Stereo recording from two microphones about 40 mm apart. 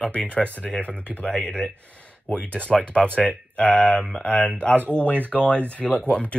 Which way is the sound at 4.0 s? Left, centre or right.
Centre.